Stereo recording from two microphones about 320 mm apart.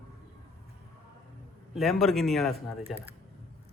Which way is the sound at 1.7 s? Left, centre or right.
Centre.